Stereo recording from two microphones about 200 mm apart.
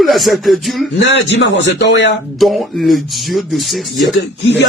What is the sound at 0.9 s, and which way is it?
A man's voice, 65° left (ahead or behind).